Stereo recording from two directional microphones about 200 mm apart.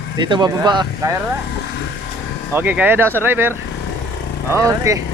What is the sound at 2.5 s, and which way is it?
Speech, 10° right (ahead or behind).